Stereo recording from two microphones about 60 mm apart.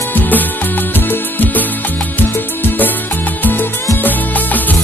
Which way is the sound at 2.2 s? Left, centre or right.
Left.